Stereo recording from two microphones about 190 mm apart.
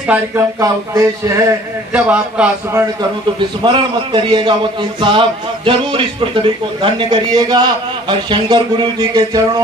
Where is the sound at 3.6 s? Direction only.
25° right (ahead or behind).